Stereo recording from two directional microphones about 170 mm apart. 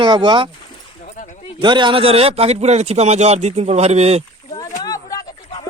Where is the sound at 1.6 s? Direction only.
25° right (ahead or behind).